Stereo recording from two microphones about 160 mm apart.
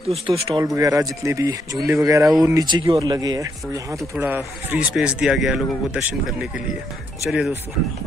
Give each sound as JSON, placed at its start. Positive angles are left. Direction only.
{"t": 0.3, "sound": "speech", "side_deg": -25}
{"t": 7.2, "sound": "speech", "side_deg": 0}